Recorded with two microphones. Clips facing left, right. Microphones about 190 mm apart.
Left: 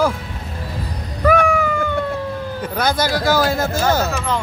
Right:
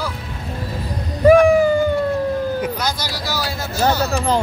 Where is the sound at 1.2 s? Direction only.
30° right (ahead or behind).